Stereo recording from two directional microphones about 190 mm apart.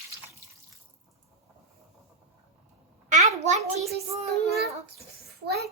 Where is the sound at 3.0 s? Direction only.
40° right (ahead or behind).